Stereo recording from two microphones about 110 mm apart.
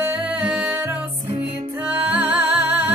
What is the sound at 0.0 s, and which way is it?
Music, 15° right (ahead or behind).